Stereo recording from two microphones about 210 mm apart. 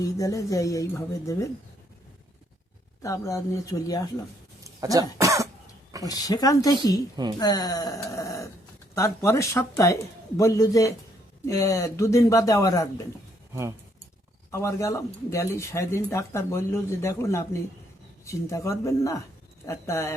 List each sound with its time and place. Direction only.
0.0 s speech: 15° left (ahead or behind)
3.0 s speech: 15° left (ahead or behind)
4.6 s speech: 15° right (ahead or behind)
6.0 s speech: 15° left (ahead or behind)
13.5 s speech: 15° right (ahead or behind)
14.5 s speech: 15° left (ahead or behind)